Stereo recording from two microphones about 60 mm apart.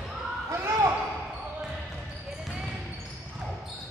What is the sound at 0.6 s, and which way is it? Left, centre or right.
Basketball bounce, right.